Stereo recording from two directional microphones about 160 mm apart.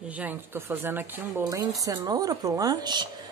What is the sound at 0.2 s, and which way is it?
A woman's voice, 15° right (ahead or behind).